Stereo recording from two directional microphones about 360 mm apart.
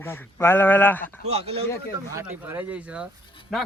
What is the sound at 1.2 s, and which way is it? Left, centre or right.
Speech, centre.